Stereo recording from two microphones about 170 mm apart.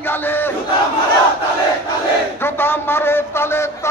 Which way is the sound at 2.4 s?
15° left (ahead or behind).